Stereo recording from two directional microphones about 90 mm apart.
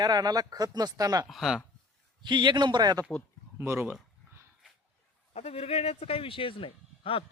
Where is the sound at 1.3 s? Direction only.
5° right (ahead or behind).